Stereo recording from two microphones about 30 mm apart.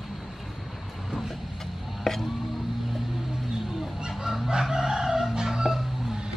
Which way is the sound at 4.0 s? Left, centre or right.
Right.